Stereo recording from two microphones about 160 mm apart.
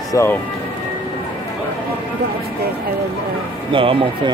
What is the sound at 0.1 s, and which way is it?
Speech, 15° left (ahead or behind).